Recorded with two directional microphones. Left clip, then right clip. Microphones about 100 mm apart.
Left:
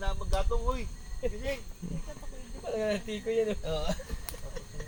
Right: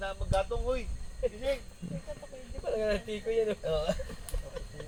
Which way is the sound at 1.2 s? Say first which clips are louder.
Right 3 dB; 20° right (ahead or behind).